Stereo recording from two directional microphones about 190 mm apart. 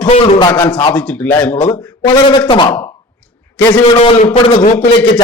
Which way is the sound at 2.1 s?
25° left (ahead or behind).